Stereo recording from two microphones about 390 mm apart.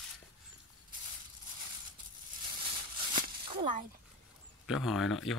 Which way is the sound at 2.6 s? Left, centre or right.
Centre.